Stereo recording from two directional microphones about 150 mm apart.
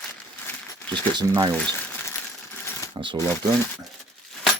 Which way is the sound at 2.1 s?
15° left (ahead or behind).